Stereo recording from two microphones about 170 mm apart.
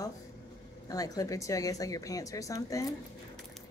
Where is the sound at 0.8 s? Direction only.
20° left (ahead or behind).